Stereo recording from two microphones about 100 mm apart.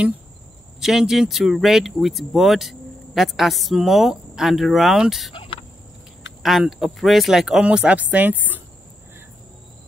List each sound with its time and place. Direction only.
0.7 s speech: 5° right (ahead or behind)
5.3 s fowl: 65° left (ahead or behind)
6.4 s speech: centre (ahead or behind); by 8.6 s 15° right (ahead or behind)